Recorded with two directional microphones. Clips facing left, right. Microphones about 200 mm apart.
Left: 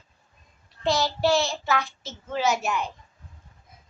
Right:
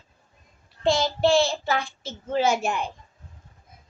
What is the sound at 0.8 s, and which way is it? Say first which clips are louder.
Child singing: right 2 dB; 25° right (ahead or behind).